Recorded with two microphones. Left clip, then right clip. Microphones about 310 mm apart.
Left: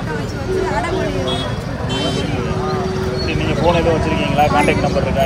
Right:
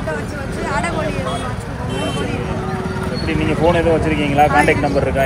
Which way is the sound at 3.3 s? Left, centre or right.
Right.